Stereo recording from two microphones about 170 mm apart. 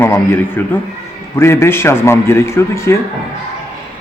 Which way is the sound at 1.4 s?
15° left (ahead or behind).